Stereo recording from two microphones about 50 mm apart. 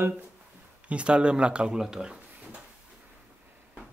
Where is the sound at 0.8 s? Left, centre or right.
Right.